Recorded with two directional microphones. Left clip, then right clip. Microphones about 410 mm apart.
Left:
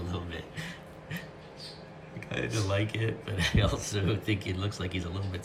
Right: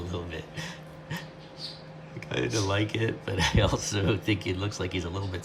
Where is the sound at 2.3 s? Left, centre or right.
Centre.